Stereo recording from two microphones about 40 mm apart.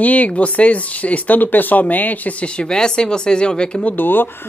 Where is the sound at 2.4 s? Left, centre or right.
Left.